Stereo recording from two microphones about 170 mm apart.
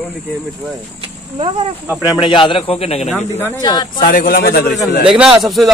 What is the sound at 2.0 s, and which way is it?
A man's voice, 30° left (ahead or behind).